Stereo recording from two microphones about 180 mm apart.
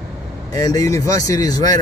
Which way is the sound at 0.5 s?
20° left (ahead or behind).